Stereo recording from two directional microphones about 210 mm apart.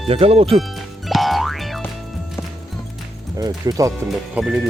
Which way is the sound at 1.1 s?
Centre (ahead or behind).